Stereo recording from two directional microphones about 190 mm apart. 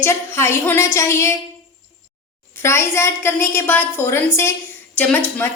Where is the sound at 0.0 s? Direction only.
15° left (ahead or behind).